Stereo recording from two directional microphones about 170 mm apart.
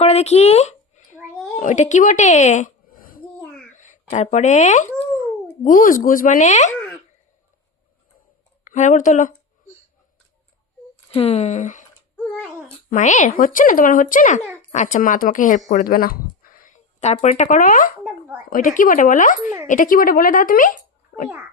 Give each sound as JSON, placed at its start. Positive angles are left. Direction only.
{"t": 0.0, "sound": "a sound", "side_deg": 40}
{"t": 1.5, "sound": "a woman's voice", "side_deg": 45}
{"t": 8.6, "sound": "speech", "side_deg": 45}
{"t": 11.1, "sound": "speech", "side_deg": 35}
{"t": 12.1, "sound": "babbling", "side_deg": 5}
{"t": 12.9, "sound": "speech", "side_deg": 45}